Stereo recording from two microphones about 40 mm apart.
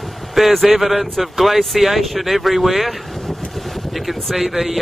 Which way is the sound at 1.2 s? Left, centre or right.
Centre.